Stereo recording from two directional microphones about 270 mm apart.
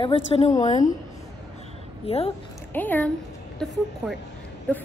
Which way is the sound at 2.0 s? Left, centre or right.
Left.